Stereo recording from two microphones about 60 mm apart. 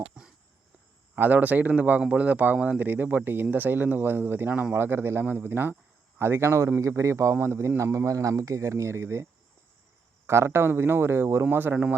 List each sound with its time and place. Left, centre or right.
0.2 s a sound: centre
1.1 s speech: right
10.2 s speech: right